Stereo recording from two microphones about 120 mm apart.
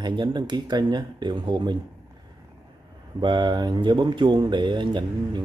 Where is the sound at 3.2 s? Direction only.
40° right (ahead or behind).